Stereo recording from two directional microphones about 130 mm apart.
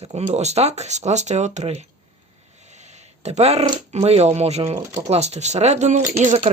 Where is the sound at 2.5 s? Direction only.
60° right (ahead or behind).